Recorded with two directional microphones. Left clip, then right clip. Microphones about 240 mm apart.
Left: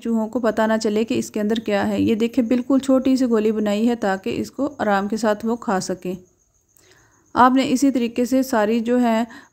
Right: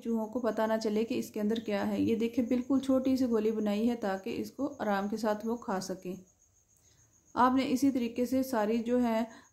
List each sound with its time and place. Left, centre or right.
0.0 s speech: left
7.3 s speech: left